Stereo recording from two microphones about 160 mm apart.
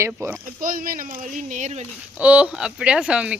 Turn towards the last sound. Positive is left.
turn(degrees=-5)  # may be behind; listen again after turning